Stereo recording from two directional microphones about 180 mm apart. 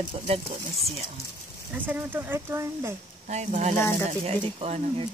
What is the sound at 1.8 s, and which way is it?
Speech, 10° right (ahead or behind).